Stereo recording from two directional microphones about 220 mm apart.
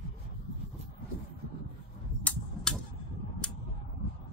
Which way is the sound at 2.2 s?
5° left (ahead or behind).